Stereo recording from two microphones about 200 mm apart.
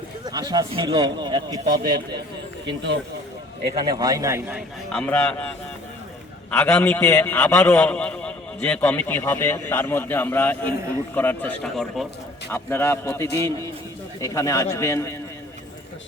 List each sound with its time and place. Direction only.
0.3 s a man's voice: 20° right (ahead or behind)
1.6 s a man's voice: 45° right (ahead or behind)
3.8 s a man's voice: 20° right (ahead or behind)
4.9 s a man's voice: 5° left (ahead or behind)